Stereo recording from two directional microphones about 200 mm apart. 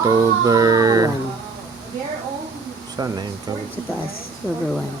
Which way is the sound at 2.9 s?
20° right (ahead or behind).